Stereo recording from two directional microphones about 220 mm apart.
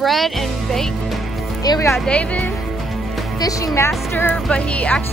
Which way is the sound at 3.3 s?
15° left (ahead or behind).